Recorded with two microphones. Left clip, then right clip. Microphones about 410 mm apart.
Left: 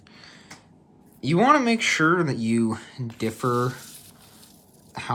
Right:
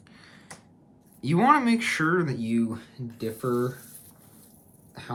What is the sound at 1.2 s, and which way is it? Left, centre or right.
Speech, centre.